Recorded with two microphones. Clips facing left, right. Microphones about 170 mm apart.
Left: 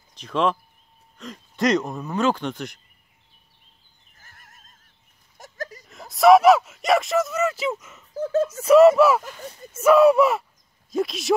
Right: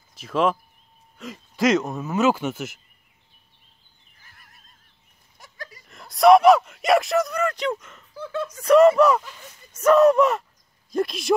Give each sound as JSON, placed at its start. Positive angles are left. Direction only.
{"t": 0.1, "sound": "speech", "side_deg": -5}
{"t": 4.1, "sound": "a sound", "side_deg": 45}
{"t": 5.9, "sound": "speech", "side_deg": 0}
{"t": 8.1, "sound": "speech", "side_deg": 40}
{"t": 8.5, "sound": "speech", "side_deg": 5}
{"t": 9.2, "sound": "speech", "side_deg": 45}
{"t": 9.7, "sound": "speech", "side_deg": 10}